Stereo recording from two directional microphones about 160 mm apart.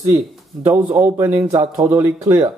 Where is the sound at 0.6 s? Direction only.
10° right (ahead or behind).